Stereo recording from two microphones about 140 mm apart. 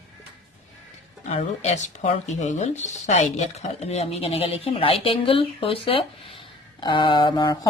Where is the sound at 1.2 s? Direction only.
55° left (ahead or behind); by 7.5 s 30° left (ahead or behind).